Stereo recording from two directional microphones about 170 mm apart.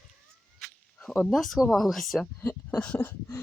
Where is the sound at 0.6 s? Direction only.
5° left (ahead or behind).